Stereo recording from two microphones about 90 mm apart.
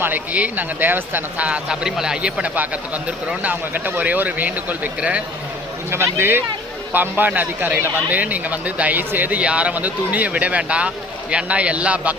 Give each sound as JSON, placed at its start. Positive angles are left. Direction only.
{"t": 0.0, "sound": "a man's voice", "side_deg": -20}
{"t": 5.9, "sound": "a man's voice", "side_deg": -25}